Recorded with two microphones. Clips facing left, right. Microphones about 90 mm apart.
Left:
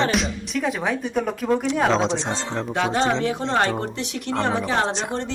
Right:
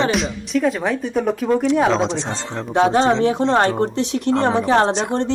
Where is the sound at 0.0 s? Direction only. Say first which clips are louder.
Right 2 dB; centre (ahead or behind).